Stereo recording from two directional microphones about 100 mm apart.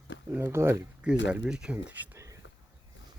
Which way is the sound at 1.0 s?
10° right (ahead or behind).